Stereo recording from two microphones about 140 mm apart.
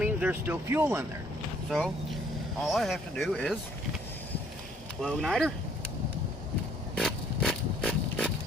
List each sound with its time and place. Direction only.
0.0 s speech: 10° right (ahead or behind)
2.6 s speech: centre (ahead or behind)
4.9 s speech: 5° left (ahead or behind)
6.9 s a sound: 5° left (ahead or behind)